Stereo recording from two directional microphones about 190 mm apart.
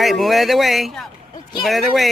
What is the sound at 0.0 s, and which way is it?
Speech, centre (ahead or behind).